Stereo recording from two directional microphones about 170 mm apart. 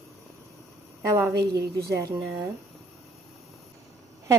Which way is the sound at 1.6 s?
70° right (ahead or behind).